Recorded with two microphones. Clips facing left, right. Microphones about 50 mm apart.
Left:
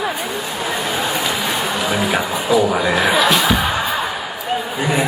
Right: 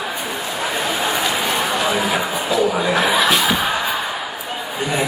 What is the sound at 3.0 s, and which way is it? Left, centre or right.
Music, centre.